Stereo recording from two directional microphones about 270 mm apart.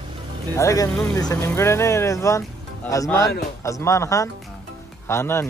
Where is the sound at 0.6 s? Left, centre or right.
Centre.